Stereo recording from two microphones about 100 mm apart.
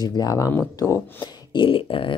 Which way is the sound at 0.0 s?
40° left (ahead or behind).